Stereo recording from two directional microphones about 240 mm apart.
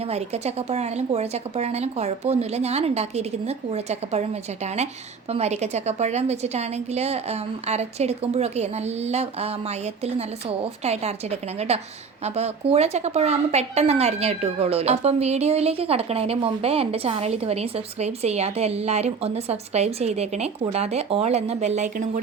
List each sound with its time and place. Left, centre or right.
0.0 s a woman's voice: right